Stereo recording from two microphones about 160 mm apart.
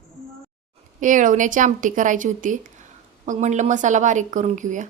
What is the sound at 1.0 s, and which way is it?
A woman's voice, 55° right (ahead or behind).